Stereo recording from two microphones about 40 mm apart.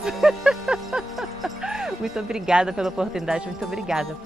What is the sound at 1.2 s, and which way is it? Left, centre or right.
Music, centre.